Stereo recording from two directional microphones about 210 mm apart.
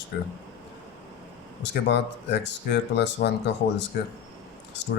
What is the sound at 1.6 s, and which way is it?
Speech, 55° left (ahead or behind).